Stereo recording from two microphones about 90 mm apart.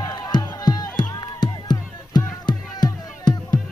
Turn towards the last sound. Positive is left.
turn(degrees=50)  # may be behind; listen again after turning